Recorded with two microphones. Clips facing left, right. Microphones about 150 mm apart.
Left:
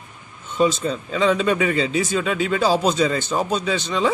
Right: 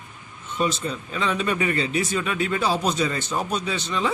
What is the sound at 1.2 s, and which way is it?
Speech, 90° left.